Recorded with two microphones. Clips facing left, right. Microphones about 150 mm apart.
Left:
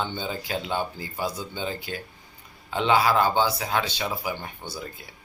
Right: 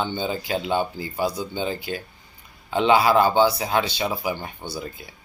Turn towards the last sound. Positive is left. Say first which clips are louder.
# right 4 dB
turn(degrees=-10)  # may be behind; listen again after turning